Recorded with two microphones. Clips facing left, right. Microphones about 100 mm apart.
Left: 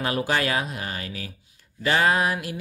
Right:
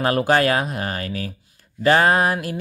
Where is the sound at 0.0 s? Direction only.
50° right (ahead or behind).